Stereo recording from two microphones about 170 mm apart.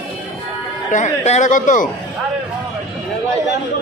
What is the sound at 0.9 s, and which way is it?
Speech, 45° left (ahead or behind).